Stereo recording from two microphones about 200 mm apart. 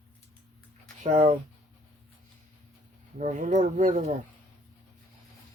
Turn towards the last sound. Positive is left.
turn(degrees=-40)  # may be behind; listen again after turning